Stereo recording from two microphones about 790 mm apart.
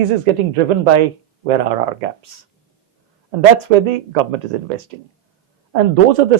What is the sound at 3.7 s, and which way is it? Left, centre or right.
Speech, right.